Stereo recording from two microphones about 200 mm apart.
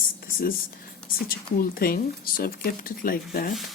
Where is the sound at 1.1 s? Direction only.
45° left (ahead or behind).